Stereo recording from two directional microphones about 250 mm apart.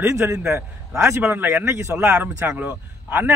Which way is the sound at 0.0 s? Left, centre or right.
Centre.